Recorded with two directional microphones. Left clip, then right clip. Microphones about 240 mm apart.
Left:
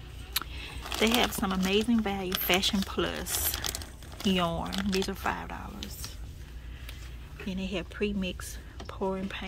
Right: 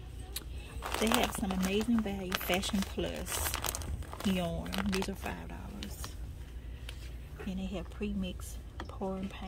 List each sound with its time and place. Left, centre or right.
0.3 s a sound: centre
1.1 s speech: centre
3.8 s a sound: centre
4.7 s speech: centre
5.1 s speech: centre
7.4 s speech: centre
8.9 s speech: left